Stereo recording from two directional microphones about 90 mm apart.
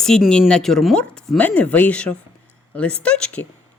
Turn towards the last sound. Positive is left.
turn(degrees=10)  # may be behind; listen again after turning